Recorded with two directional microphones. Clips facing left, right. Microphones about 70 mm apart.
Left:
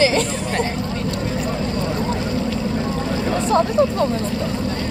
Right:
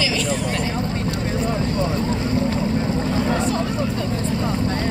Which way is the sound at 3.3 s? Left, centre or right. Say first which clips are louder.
Left 5 dB; left.